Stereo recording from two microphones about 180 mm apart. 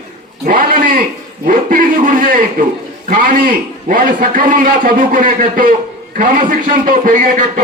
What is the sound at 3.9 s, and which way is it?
A man's voice, 50° right (ahead or behind).